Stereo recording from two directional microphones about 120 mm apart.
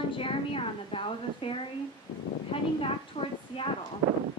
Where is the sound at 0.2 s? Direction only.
50° left (ahead or behind).